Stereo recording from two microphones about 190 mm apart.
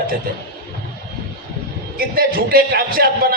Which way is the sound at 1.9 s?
50° right (ahead or behind).